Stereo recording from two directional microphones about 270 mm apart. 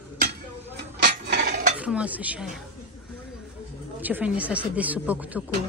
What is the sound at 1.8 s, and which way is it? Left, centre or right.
Speech, centre.